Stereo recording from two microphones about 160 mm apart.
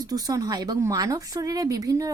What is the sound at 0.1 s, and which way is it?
Speech, 20° right (ahead or behind).